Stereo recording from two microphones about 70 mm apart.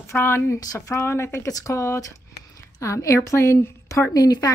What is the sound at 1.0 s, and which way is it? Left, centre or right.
A woman's voice, left.